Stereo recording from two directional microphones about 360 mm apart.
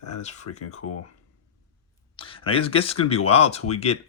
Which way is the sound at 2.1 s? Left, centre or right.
Centre.